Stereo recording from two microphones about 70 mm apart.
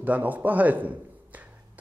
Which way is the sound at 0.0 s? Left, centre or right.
Right.